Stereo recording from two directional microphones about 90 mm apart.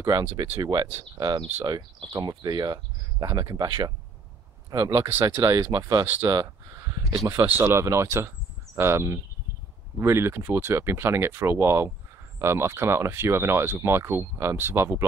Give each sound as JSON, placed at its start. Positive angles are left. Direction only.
{"t": 0.4, "sound": "speech", "side_deg": -45}
{"t": 6.0, "sound": "speech", "side_deg": -20}
{"t": 6.3, "sound": "speech", "side_deg": -40}